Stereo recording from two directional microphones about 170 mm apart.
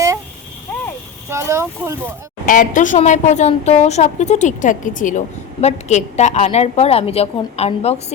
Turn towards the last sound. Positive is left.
turn(degrees=40)  # may be behind; listen again after turning